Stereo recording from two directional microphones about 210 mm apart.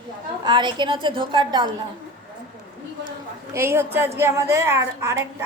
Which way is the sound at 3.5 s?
10° right (ahead or behind).